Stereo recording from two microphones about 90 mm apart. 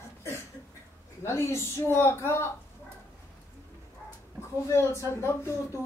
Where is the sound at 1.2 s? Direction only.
30° left (ahead or behind).